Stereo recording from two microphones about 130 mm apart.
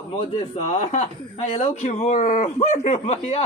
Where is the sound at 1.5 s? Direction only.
60° left (ahead or behind); by 2.5 s 80° left.